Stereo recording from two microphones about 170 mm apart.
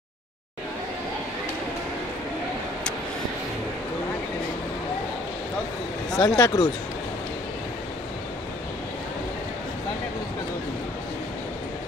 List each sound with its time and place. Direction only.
6.1 s speech: 20° left (ahead or behind)